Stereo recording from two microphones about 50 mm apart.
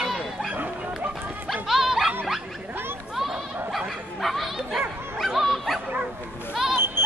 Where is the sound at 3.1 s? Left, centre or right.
Centre.